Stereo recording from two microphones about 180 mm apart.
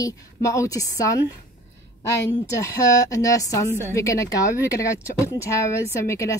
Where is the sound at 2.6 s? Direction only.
20° left (ahead or behind).